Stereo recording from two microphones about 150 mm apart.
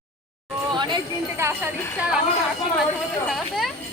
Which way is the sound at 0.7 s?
30° right (ahead or behind).